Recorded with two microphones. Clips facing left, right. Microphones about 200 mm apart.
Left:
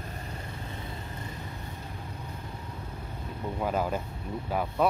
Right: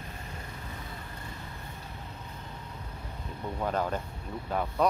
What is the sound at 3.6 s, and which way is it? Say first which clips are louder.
Speech: left 1 dB; 10° left (ahead or behind).